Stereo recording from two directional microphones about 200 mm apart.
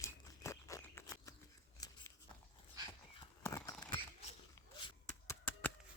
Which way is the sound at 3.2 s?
15° left (ahead or behind).